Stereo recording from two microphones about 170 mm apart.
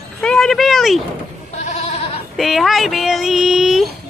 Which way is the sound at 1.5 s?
40° left (ahead or behind).